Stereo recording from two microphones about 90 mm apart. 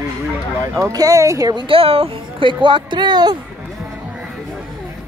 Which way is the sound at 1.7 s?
90° right.